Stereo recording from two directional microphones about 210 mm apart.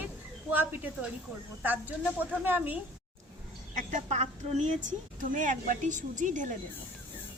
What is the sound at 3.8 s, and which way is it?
A woman's voice, 35° right (ahead or behind).